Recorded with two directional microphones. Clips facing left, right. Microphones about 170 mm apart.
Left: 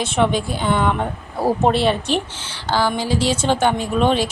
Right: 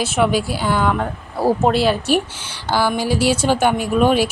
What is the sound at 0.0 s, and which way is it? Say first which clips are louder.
Speech: right 1 dB; 5° right (ahead or behind).